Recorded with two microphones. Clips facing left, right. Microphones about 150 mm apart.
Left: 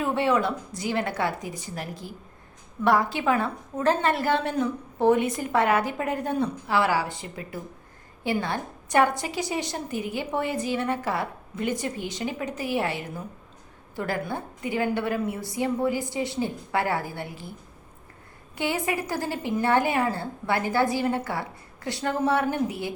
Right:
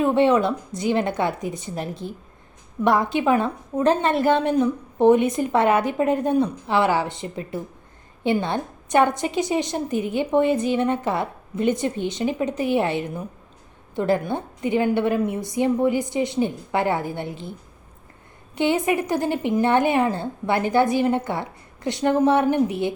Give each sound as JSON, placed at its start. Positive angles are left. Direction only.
{"t": 0.0, "sound": "a woman's voice", "side_deg": -20}
{"t": 18.5, "sound": "a woman's voice", "side_deg": -20}